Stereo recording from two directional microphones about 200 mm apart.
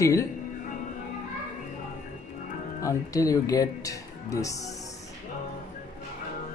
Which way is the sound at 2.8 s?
15° left (ahead or behind).